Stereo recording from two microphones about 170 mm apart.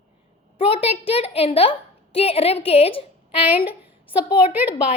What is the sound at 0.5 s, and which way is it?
A woman's voice, 35° left (ahead or behind).